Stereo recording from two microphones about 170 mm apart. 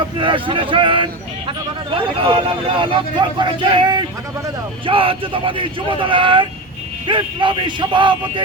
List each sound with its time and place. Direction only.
0.2 s speech: 30° right (ahead or behind)